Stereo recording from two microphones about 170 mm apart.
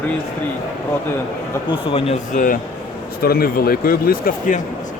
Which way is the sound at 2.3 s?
50° left (ahead or behind).